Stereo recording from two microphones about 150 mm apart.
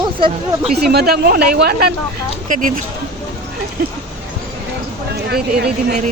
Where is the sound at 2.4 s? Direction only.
60° right (ahead or behind).